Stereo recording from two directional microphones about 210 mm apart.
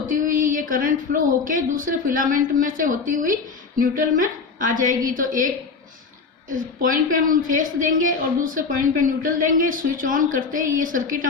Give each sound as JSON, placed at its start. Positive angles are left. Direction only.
{"t": 0.1, "sound": "a sound", "side_deg": -40}
{"t": 0.7, "sound": "speech", "side_deg": -40}
{"t": 6.5, "sound": "speech", "side_deg": -40}